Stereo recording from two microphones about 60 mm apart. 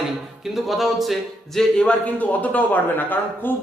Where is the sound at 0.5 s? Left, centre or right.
Centre.